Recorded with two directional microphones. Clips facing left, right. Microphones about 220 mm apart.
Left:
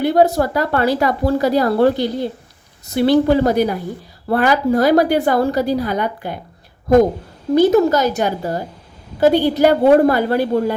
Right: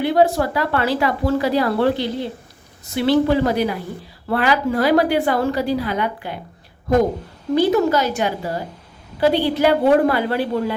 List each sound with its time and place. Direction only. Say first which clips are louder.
0.0 s speech: left 2 dB; 40° left (ahead or behind)
7.5 s a woman's voice: left 4 dB; 40° left (ahead or behind)